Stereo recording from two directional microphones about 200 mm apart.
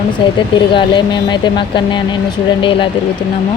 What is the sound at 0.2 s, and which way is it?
Speech, 25° left (ahead or behind).